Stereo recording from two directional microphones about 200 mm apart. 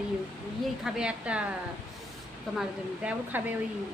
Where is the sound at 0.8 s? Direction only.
5° right (ahead or behind).